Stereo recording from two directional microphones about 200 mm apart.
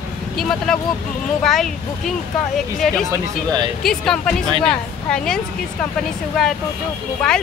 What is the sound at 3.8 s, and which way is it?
Speech, centre (ahead or behind).